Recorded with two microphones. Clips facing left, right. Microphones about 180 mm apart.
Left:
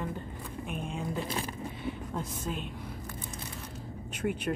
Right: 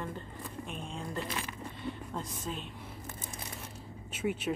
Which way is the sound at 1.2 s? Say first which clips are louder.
Left 4 dB; 30° left (ahead or behind).